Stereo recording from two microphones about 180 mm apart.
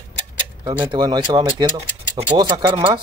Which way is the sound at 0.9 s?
25° right (ahead or behind).